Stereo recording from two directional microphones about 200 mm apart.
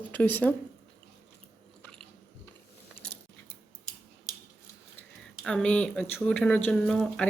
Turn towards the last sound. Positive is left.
turn(degrees=0)  # may be behind; listen again after turning